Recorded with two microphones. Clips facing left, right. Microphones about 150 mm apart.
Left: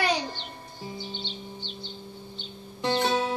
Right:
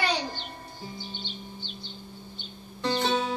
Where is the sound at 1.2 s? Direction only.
45° right (ahead or behind).